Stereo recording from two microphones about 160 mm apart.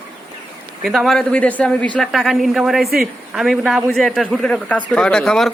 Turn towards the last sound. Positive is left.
turn(degrees=5)  # may be behind; listen again after turning